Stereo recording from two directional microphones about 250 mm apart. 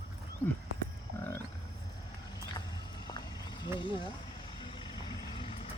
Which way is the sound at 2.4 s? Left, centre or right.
Centre.